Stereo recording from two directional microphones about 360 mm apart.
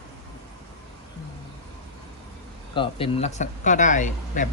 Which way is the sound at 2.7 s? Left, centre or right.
Centre.